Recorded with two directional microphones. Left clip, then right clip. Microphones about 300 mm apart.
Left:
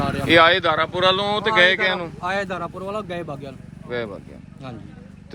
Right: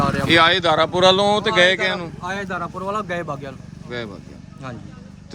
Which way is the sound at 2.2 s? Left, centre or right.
Centre.